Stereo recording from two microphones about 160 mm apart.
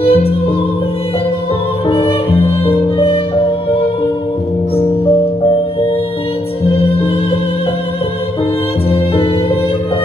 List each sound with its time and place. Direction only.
0.0 s music: 35° left (ahead or behind)
1.9 s music: 35° left (ahead or behind)
6.6 s music: 40° left (ahead or behind)
8.9 s music: 35° left (ahead or behind)